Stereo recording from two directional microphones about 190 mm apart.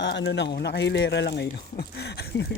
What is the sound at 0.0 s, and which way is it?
Speech, 70° left (ahead or behind).